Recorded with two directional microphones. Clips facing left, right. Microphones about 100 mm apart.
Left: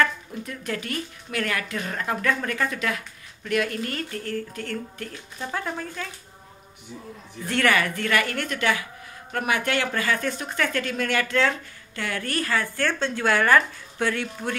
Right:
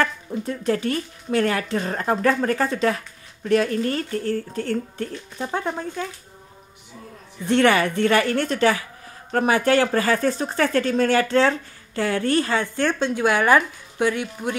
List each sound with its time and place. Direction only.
0.0 s speech: 30° right (ahead or behind)
7.4 s speech: 25° right (ahead or behind)